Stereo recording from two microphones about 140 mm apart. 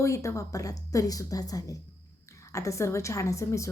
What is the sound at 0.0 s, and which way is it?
A woman's voice, 20° left (ahead or behind).